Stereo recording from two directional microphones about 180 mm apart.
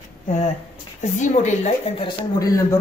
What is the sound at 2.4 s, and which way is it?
Speech, 20° left (ahead or behind).